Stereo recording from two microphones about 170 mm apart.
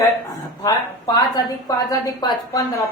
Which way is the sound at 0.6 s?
25° left (ahead or behind).